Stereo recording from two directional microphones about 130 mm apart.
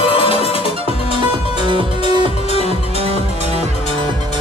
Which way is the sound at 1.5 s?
40° right (ahead or behind).